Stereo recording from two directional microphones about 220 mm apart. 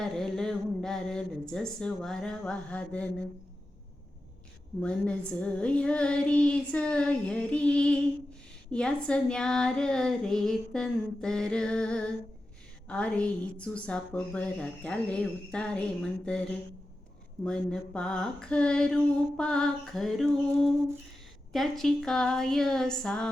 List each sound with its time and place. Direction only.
0.0 s speech: centre (ahead or behind)
4.8 s a woman's voice: 5° left (ahead or behind)